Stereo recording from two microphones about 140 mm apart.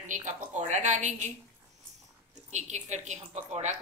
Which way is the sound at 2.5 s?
55° right (ahead or behind).